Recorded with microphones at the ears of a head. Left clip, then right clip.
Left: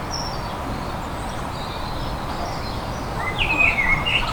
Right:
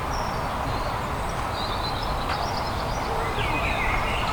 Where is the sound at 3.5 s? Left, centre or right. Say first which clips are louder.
Left 10 dB; left.